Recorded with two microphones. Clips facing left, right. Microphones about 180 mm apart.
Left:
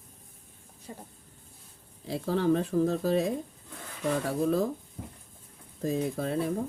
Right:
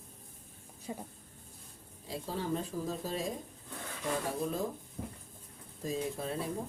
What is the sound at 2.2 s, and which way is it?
Speech, 85° left.